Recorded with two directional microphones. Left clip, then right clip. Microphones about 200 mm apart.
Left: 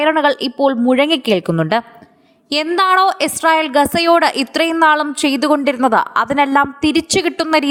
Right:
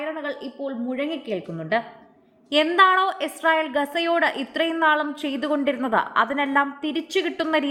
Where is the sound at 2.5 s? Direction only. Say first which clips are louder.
Left 3 dB; 25° left (ahead or behind).